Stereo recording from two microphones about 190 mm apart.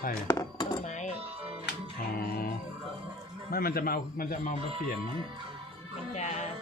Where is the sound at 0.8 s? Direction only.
40° left (ahead or behind).